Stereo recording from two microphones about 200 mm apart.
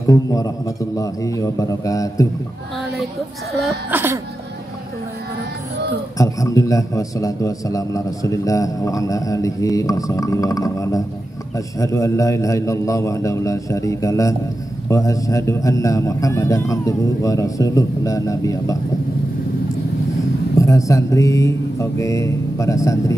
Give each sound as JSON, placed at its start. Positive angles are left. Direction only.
{"t": 0.0, "sound": "a man's voice", "side_deg": 15}
{"t": 3.6, "sound": "speech", "side_deg": -10}
{"t": 6.1, "sound": "a man's voice", "side_deg": 15}
{"t": 20.5, "sound": "a man's voice", "side_deg": 15}